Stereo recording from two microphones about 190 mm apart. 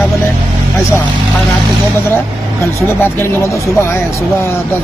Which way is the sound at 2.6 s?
10° left (ahead or behind).